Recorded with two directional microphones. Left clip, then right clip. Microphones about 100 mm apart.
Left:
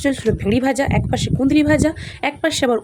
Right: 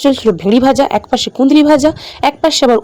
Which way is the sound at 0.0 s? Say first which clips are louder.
Right 8 dB; 60° right (ahead or behind).